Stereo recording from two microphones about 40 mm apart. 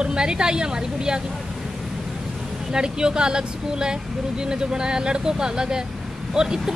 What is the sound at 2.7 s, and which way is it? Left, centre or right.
Speech, centre.